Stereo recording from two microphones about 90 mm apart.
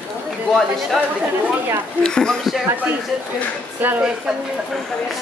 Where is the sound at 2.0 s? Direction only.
10° left (ahead or behind).